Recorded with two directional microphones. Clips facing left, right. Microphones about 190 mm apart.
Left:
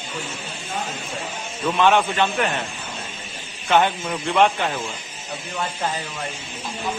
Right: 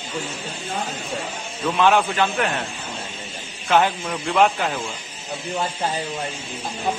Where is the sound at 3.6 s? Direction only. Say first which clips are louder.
Even; centre (ahead or behind).